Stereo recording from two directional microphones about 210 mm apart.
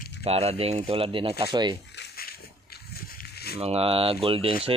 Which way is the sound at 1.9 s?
50° left (ahead or behind).